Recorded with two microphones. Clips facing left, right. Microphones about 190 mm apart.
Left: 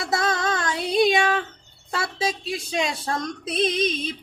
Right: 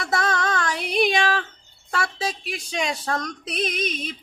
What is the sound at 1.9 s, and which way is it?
Speech, 25° left (ahead or behind).